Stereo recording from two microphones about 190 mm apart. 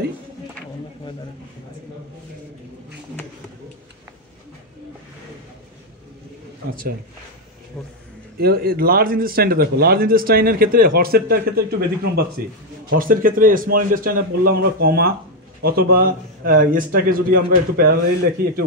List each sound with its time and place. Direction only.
6.7 s a man's voice: 50° right (ahead or behind)
7.7 s a man's voice: centre (ahead or behind)
8.4 s a man's voice: 55° right (ahead or behind)